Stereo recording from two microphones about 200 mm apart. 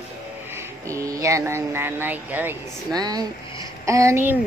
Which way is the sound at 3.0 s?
20° right (ahead or behind).